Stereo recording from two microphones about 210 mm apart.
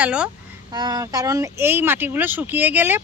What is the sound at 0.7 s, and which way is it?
Speech, 20° right (ahead or behind).